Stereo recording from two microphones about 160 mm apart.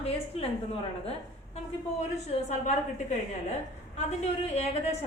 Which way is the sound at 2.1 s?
45° left (ahead or behind).